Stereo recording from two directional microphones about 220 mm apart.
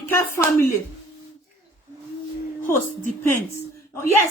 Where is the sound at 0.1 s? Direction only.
15° left (ahead or behind).